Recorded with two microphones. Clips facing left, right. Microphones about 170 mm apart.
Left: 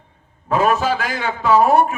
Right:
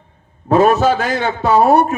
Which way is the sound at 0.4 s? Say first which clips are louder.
Right 6 dB; 40° right (ahead or behind).